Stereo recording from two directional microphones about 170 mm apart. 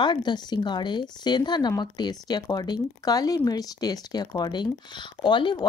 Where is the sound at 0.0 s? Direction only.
25° left (ahead or behind).